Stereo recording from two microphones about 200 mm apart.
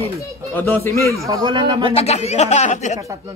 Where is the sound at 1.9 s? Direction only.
30° left (ahead or behind).